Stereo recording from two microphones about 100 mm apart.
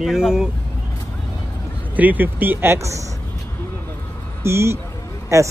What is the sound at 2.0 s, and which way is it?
Speech, 15° right (ahead or behind).